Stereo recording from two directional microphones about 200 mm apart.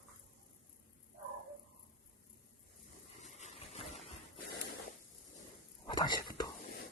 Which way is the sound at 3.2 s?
35° left (ahead or behind).